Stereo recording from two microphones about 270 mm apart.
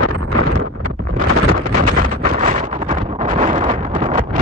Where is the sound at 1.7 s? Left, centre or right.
Right.